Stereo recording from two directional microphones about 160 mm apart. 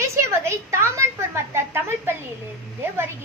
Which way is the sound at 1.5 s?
15° right (ahead or behind).